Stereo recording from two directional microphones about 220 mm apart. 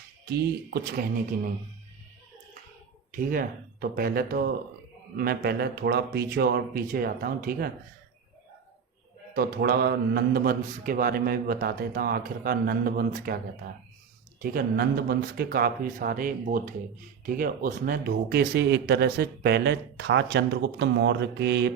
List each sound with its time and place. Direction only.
0.3 s speech: 45° right (ahead or behind)
3.1 s speech: 40° right (ahead or behind)
9.3 s speech: 40° right (ahead or behind)
14.4 s speech: 45° right (ahead or behind)